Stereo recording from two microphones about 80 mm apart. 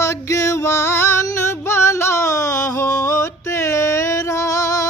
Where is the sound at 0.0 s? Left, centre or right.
Left.